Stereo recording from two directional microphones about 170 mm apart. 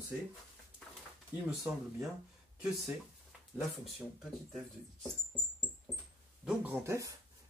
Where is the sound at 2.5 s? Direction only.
5° right (ahead or behind).